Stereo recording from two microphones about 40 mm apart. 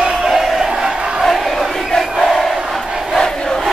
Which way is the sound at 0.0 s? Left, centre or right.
Centre.